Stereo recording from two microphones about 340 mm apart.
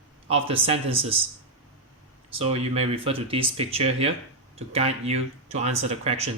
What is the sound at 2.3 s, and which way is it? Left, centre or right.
Speech, centre.